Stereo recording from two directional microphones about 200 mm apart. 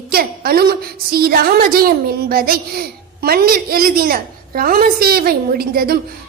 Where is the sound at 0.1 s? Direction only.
50° right (ahead or behind).